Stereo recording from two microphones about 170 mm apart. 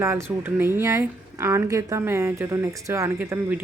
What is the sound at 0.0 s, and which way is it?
A woman's voice, 15° right (ahead or behind).